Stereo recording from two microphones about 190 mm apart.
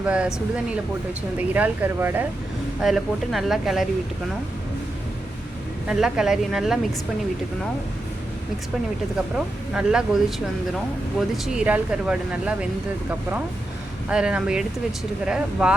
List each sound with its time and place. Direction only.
0.0 s speech: 5° right (ahead or behind)
5.9 s speech: 5° right (ahead or behind)
9.1 s speech: 5° right (ahead or behind)
14.1 s speech: 5° right (ahead or behind)